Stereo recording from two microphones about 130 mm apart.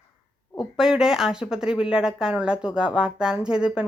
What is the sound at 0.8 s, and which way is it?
A woman's voice, 5° right (ahead or behind).